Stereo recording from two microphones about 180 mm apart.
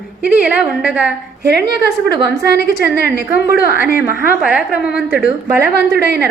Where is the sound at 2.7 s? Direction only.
60° left (ahead or behind).